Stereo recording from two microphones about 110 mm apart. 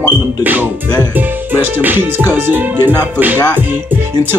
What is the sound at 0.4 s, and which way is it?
Speech, 15° right (ahead or behind).